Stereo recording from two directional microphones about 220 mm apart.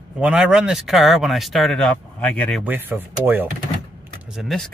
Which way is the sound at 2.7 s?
10° right (ahead or behind).